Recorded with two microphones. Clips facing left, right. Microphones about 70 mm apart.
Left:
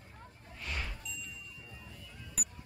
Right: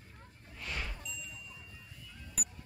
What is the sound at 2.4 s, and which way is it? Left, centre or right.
Music, centre.